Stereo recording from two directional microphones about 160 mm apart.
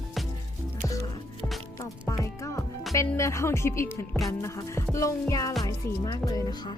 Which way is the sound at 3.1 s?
20° left (ahead or behind).